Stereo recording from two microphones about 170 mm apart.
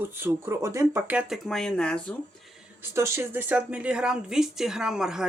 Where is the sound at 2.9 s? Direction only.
15° right (ahead or behind).